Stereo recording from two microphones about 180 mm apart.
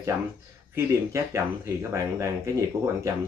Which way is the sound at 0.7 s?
15° right (ahead or behind).